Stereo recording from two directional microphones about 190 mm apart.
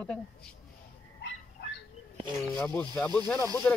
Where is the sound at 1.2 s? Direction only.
70° left (ahead or behind).